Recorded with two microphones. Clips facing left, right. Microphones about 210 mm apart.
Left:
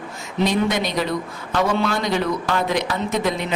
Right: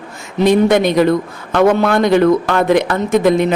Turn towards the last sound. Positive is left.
turn(degrees=-50)  # may be behind; listen again after turning